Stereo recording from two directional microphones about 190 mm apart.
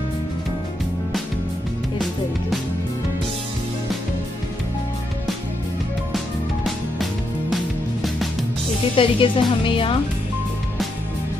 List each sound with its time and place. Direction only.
6.1 s music: centre (ahead or behind)
8.9 s a woman's voice: 25° left (ahead or behind)